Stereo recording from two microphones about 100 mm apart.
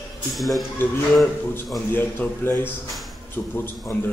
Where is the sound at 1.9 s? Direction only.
20° left (ahead or behind).